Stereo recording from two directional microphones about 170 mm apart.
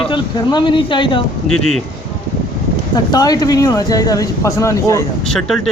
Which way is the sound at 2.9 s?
25° left (ahead or behind).